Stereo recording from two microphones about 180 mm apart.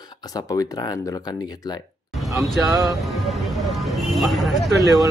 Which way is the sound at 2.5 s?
Centre (ahead or behind).